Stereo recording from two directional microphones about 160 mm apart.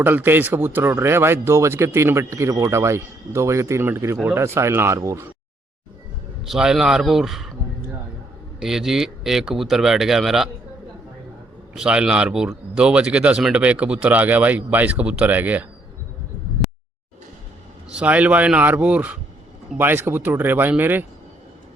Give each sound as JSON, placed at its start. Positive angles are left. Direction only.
{"t": 0.0, "sound": "speech", "side_deg": -15}
{"t": 6.4, "sound": "speech", "side_deg": 0}
{"t": 8.5, "sound": "speech", "side_deg": 0}
{"t": 11.7, "sound": "speech", "side_deg": -5}
{"t": 17.9, "sound": "speech", "side_deg": -10}